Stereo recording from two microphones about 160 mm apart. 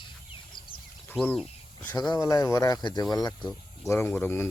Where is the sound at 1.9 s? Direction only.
25° left (ahead or behind).